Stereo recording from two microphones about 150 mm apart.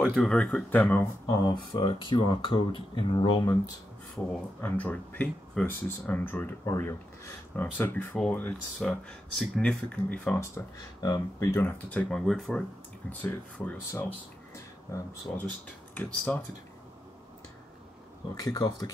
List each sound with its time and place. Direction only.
0.0 s speech: 5° left (ahead or behind); by 3.5 s 30° left (ahead or behind)
4.6 s speech: 10° left (ahead or behind)
11.0 s speech: 20° left (ahead or behind)
18.3 s speech: 25° left (ahead or behind)